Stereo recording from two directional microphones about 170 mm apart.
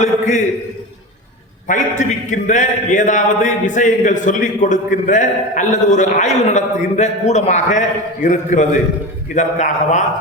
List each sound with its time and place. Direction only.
0.0 s a man's voice: 45° left (ahead or behind)
1.6 s a man's voice: 45° left (ahead or behind)